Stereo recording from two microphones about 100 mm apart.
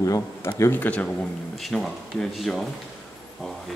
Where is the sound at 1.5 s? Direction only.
Centre (ahead or behind).